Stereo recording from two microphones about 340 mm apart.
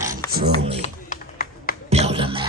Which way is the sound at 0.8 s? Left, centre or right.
Left.